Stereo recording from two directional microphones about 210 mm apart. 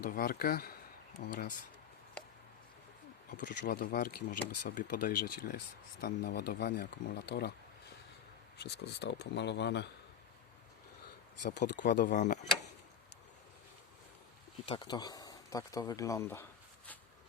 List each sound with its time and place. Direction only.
0.0 s speech: 45° left (ahead or behind)
3.2 s speech: 40° left (ahead or behind)
8.5 s speech: 50° left (ahead or behind)
11.4 s speech: 55° left (ahead or behind)
12.0 s speech: 35° left (ahead or behind)
14.7 s speech: 20° left (ahead or behind)